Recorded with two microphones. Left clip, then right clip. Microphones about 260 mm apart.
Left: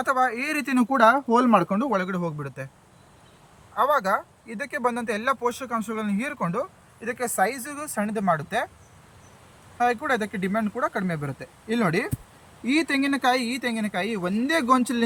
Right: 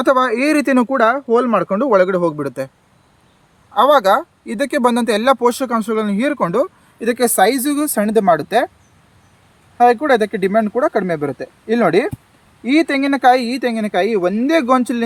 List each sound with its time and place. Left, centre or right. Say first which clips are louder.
0.0 s speech: right 9 dB; right
4.4 s speech: right 11 dB; right
9.7 s speech: right 11 dB; centre